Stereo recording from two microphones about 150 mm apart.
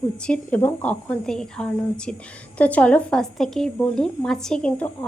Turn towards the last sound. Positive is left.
turn(degrees=10)  # may be behind; listen again after turning